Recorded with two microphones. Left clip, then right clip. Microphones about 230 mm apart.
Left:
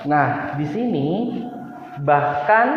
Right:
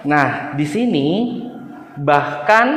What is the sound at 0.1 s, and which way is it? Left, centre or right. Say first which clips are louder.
Speech: right 2 dB; right.